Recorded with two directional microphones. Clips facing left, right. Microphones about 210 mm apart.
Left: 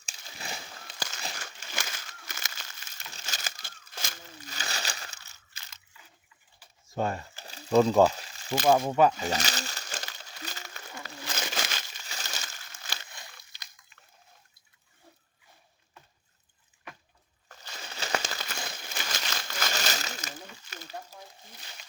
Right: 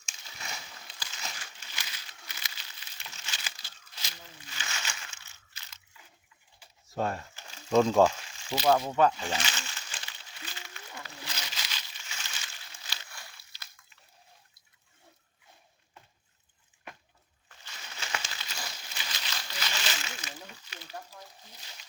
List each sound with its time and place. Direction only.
0.0 s a sound: 35° left (ahead or behind)
6.8 s speech: centre (ahead or behind)
7.3 s crumpling: 35° left (ahead or behind)
7.7 s speech: centre (ahead or behind)
8.1 s a sound: 35° left (ahead or behind)
8.5 s speech: 50° left (ahead or behind)
8.9 s speech: 10° left (ahead or behind)
9.1 s crumpling: 40° left (ahead or behind)
17.5 s crumpling: 40° left (ahead or behind)
21.6 s wild animals: 60° left (ahead or behind)